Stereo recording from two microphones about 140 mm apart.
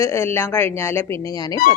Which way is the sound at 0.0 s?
20° left (ahead or behind).